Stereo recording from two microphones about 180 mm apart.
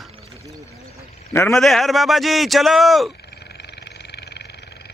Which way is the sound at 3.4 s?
65° left (ahead or behind).